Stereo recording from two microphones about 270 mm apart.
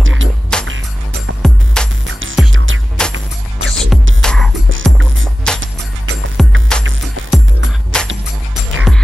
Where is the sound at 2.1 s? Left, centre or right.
Right.